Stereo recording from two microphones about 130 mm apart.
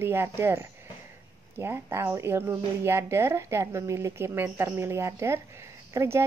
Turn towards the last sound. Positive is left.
turn(degrees=-20)  # may be behind; listen again after turning